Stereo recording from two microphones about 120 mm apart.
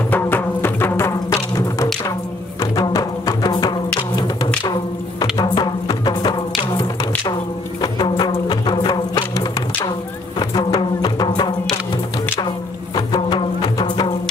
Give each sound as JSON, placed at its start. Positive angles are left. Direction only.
{"t": 0.1, "sound": "music", "side_deg": 15}
{"t": 5.2, "sound": "music", "side_deg": 35}
{"t": 7.8, "sound": "music", "side_deg": 35}
{"t": 12.9, "sound": "music", "side_deg": 35}